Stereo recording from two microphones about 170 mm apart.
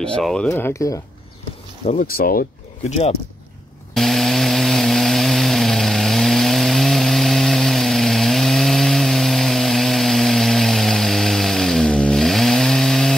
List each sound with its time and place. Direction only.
0.0 s speech: 5° left (ahead or behind)
0.5 s speech: 15° left (ahead or behind)
1.9 s speech: 55° left (ahead or behind)
2.9 s speech: 35° left (ahead or behind)
3.9 s chainsaw: centre (ahead or behind)